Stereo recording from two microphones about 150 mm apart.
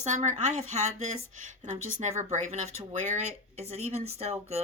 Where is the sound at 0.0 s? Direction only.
55° right (ahead or behind).